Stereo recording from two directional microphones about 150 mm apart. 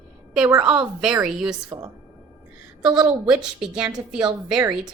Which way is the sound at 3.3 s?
5° right (ahead or behind).